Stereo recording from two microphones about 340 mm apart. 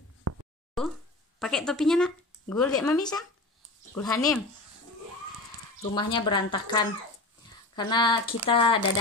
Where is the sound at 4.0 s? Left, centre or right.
Centre.